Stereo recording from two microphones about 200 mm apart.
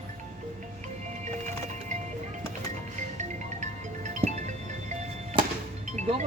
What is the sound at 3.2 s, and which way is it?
Music, 35° right (ahead or behind).